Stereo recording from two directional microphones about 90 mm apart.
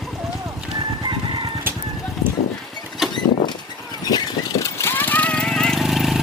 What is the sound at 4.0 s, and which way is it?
Vehicle, 45° left (ahead or behind).